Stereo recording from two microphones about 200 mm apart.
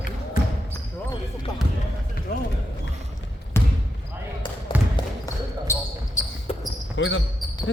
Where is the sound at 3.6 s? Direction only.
10° left (ahead or behind).